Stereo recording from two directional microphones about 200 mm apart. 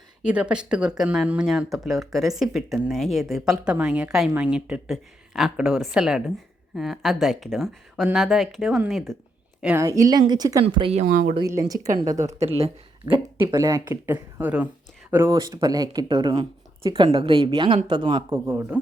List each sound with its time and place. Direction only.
0.3 s a woman's voice: 5° right (ahead or behind); by 11.0 s 25° right (ahead or behind)
11.0 s speech: 45° right (ahead or behind)
11.3 s speech: 15° right (ahead or behind)
12.4 s speech: 30° right (ahead or behind)
13.1 s speech: 15° right (ahead or behind)